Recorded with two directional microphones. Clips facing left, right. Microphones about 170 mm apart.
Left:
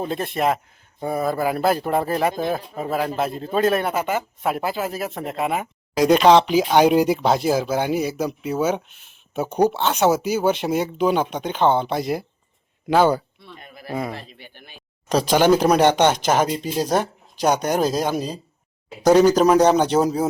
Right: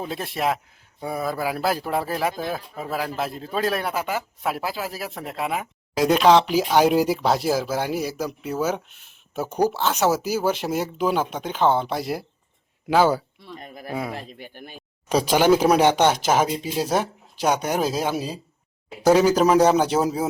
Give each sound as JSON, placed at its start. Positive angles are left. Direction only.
{"t": 0.0, "sound": "speech", "side_deg": 0}
{"t": 13.6, "sound": "speech", "side_deg": -40}
{"t": 13.9, "sound": "speech", "side_deg": -5}
{"t": 14.2, "sound": "speech", "side_deg": -45}
{"t": 15.1, "sound": "speech", "side_deg": -10}